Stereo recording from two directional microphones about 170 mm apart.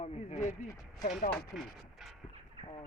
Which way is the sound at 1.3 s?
Centre (ahead or behind).